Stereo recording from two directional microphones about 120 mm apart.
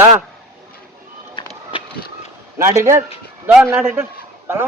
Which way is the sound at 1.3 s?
45° left (ahead or behind).